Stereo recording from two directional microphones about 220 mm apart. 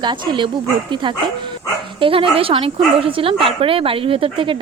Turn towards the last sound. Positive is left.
turn(degrees=-25)  # may be behind; listen again after turning